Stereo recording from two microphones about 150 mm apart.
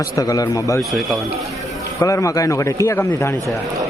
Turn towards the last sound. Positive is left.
turn(degrees=20)  # may be behind; listen again after turning